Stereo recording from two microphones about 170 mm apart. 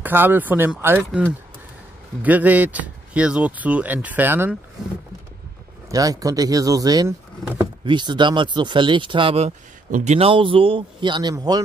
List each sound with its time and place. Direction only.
0.0 s speech: 10° right (ahead or behind)
2.2 s speech: 10° right (ahead or behind)
5.9 s speech: 20° right (ahead or behind)
9.8 s speech: 50° right (ahead or behind)
10.1 s speech: 30° right (ahead or behind)